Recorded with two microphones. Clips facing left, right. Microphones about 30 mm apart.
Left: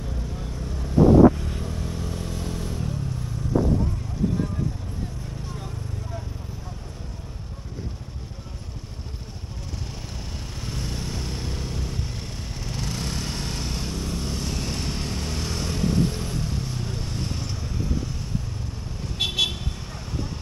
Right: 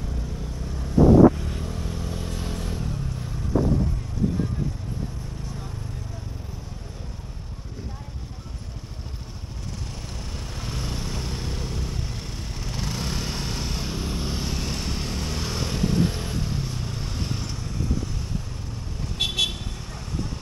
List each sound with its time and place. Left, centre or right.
0.7 s vehicle: centre
10.6 s vehicle: centre
13.9 s vehicle: centre
19.1 s vehicle: centre